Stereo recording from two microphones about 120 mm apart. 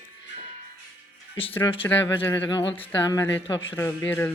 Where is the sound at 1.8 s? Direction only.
20° left (ahead or behind).